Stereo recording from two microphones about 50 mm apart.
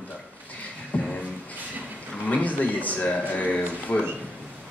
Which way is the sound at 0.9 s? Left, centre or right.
Left.